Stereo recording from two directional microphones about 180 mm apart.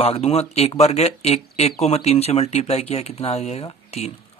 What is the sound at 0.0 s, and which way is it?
Speech, 35° left (ahead or behind).